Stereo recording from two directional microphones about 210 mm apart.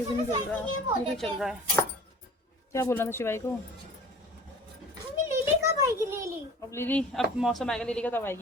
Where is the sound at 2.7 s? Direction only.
10° left (ahead or behind).